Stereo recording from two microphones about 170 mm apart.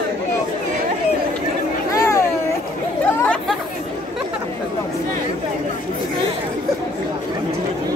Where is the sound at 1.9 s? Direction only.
20° left (ahead or behind).